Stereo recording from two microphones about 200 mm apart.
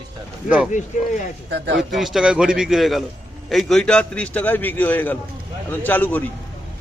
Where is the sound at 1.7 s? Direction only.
Centre (ahead or behind).